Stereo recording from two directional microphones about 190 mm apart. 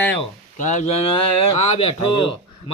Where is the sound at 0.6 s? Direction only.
40° left (ahead or behind).